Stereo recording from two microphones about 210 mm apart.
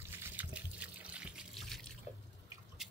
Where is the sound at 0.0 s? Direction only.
10° right (ahead or behind).